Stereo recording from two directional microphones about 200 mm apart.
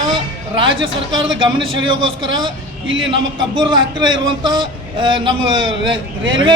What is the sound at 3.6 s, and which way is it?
Speech, 20° right (ahead or behind).